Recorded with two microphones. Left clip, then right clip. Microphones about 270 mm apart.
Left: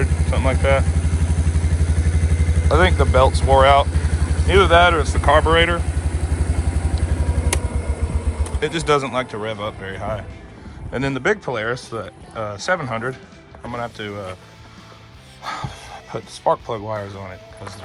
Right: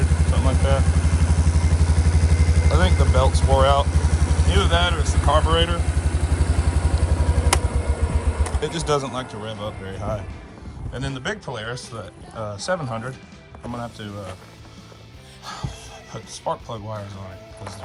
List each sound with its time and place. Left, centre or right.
0.0 s vehicle: centre
2.9 s speech: centre
3.5 s speech: centre
3.8 s vehicle: centre
4.4 s speech: centre
5.8 s vehicle: centre
8.6 s speech: centre
12.4 s speech: centre
15.4 s music: centre
16.1 s speech: centre